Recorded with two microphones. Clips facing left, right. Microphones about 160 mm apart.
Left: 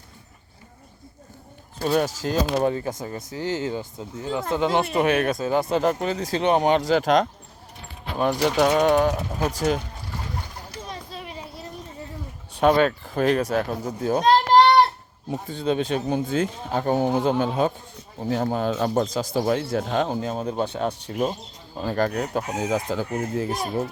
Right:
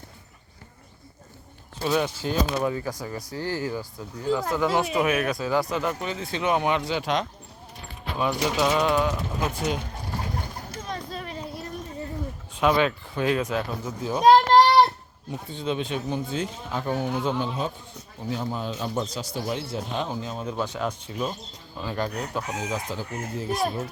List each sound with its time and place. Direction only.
1.8 s speech: 45° left (ahead or behind)
8.4 s speech: 55° left (ahead or behind); by 9.7 s 40° left (ahead or behind)
11.1 s a sound: 5° left (ahead or behind)
12.5 s speech: 45° left (ahead or behind)
14.5 s child singing: 5° left (ahead or behind)
15.3 s speech: 40° left (ahead or behind)
17.3 s speech: 55° left (ahead or behind); by 20.9 s 30° left (ahead or behind)
21.8 s speech: 50° left (ahead or behind)